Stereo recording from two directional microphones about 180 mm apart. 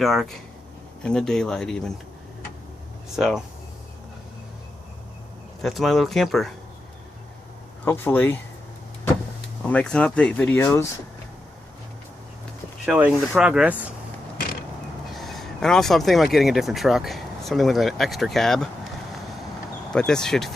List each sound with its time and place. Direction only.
0.0 s speech: centre (ahead or behind)
3.2 s speech: centre (ahead or behind)
5.6 s speech: centre (ahead or behind)
7.9 s speech: 10° left (ahead or behind)
9.6 s speech: 5° left (ahead or behind)
12.8 s speech: 5° right (ahead or behind)
15.1 s speech: centre (ahead or behind)
19.9 s speech: 5° left (ahead or behind)